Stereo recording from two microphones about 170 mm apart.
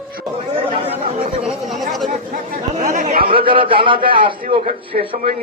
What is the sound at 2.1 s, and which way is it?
Chatter, 45° right (ahead or behind).